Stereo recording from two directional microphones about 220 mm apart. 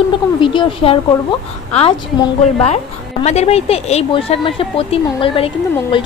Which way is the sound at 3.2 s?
30° left (ahead or behind).